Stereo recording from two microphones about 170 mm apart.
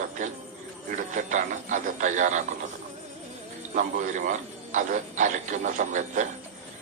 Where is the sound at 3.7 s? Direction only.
50° right (ahead or behind).